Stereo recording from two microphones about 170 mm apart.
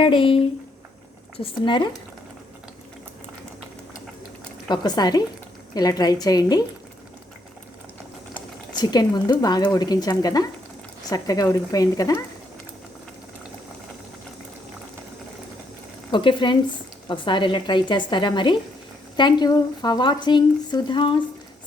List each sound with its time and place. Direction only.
0.0 s speech: 30° left (ahead or behind)
4.7 s speech: 25° left (ahead or behind)
8.7 s speech: 25° left (ahead or behind)
16.1 s speech: 25° left (ahead or behind)